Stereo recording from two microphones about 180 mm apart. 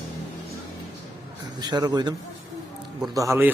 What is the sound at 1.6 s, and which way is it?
Speech, 20° right (ahead or behind).